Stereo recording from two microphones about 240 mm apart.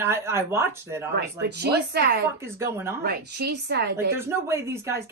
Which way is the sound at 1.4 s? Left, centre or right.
Right.